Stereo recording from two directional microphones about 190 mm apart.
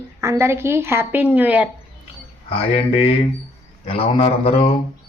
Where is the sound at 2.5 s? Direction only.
30° left (ahead or behind).